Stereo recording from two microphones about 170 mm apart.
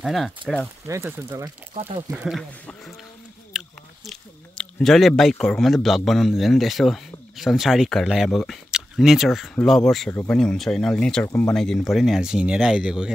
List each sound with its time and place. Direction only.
0.0 s speech: centre (ahead or behind)
0.8 s speech: 15° right (ahead or behind)
1.7 s speech: 40° right (ahead or behind)
2.2 s speech: centre (ahead or behind)